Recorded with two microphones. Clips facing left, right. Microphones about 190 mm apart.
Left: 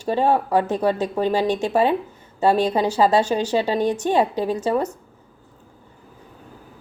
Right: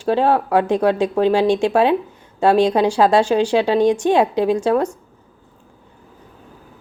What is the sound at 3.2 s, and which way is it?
Speech, 10° right (ahead or behind).